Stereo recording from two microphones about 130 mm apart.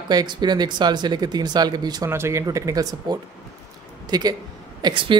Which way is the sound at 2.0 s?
20° right (ahead or behind).